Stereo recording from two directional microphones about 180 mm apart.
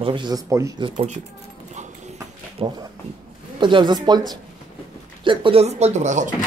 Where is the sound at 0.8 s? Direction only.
30° right (ahead or behind).